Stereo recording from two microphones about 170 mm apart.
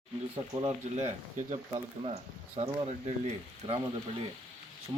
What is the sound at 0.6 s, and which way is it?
Speech, 40° right (ahead or behind).